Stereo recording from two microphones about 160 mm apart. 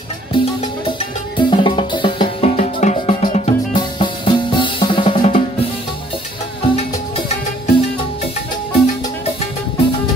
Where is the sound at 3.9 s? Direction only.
30° left (ahead or behind).